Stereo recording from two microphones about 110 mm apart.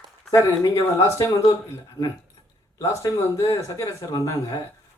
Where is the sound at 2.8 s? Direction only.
30° left (ahead or behind).